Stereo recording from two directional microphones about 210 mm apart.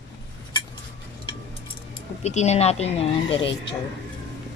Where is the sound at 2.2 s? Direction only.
30° left (ahead or behind).